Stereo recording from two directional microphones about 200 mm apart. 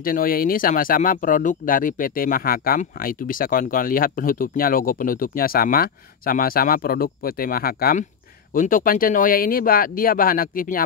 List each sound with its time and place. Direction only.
0.0 s speech: 45° left (ahead or behind)